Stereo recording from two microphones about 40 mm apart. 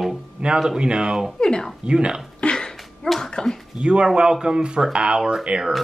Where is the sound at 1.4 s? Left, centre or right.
Centre.